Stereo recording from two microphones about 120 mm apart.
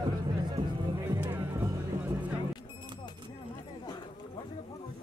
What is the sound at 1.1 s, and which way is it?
Music, 20° right (ahead or behind).